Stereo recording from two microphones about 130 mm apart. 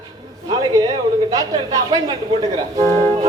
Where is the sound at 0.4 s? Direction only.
30° right (ahead or behind).